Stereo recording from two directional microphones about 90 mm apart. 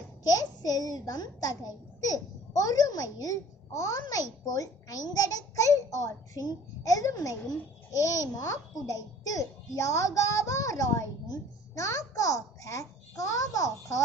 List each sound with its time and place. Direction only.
0.3 s a child's voice: 45° left (ahead or behind)